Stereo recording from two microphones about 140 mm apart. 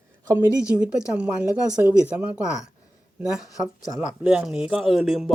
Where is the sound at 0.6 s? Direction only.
5° right (ahead or behind).